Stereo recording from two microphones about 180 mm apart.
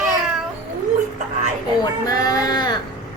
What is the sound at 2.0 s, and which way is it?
Speech, 20° left (ahead or behind).